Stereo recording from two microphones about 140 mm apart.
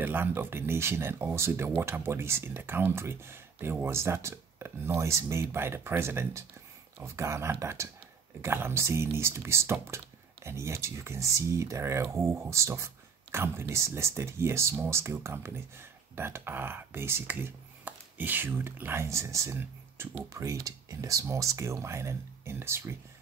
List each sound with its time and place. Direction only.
0.0 s speech: 15° right (ahead or behind)